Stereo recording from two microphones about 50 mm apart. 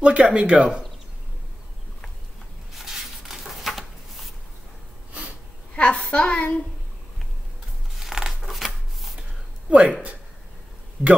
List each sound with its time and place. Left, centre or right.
0.0 s speech: right
2.7 s a sound: centre
5.8 s a woman's voice: left
7.9 s scissors: centre
9.7 s speech: right